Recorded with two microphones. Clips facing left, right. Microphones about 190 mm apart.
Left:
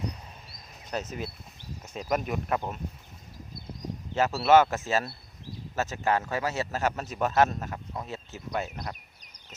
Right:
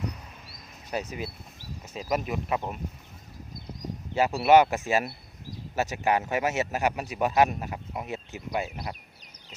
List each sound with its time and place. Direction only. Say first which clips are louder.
0.9 s speech: right 1 dB; 10° right (ahead or behind)
4.1 s a man's voice: right 1 dB; 10° right (ahead or behind)